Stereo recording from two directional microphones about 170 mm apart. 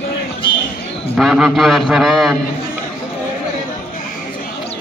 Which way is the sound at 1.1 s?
5° right (ahead or behind).